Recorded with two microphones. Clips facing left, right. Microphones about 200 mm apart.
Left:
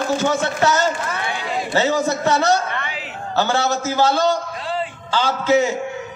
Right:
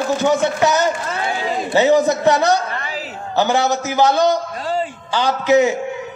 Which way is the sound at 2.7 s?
40° right (ahead or behind).